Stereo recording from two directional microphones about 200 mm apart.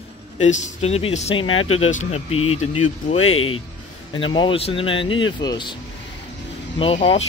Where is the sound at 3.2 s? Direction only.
90° left.